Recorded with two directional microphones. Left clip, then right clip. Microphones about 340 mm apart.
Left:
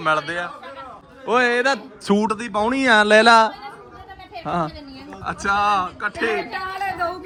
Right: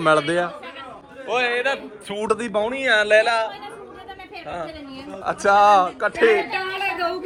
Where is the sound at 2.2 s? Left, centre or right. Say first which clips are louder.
Even; centre.